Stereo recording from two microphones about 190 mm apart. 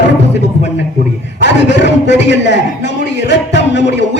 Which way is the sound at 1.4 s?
65° left (ahead or behind).